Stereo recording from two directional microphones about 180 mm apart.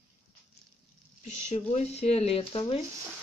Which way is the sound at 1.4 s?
40° left (ahead or behind).